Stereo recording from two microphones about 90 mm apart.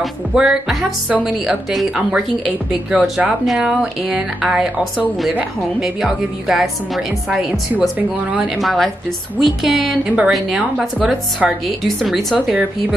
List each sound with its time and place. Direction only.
0.0 s speech: 5° right (ahead or behind)
7.8 s speech: 5° right (ahead or behind)
10.0 s speech: 15° right (ahead or behind)